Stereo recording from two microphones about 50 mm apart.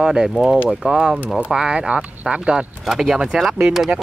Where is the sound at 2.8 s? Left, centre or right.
Centre.